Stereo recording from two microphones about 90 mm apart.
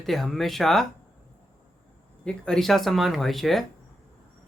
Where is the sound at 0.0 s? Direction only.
Centre (ahead or behind).